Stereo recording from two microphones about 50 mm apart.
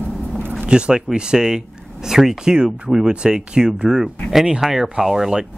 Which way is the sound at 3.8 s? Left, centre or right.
Centre.